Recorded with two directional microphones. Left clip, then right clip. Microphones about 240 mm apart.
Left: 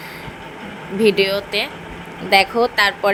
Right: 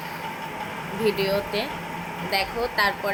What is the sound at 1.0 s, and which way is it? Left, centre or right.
A woman's voice, left.